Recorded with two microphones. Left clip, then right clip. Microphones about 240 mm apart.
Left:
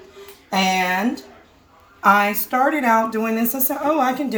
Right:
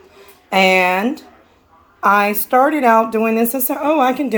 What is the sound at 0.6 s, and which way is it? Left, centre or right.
A woman's voice, right.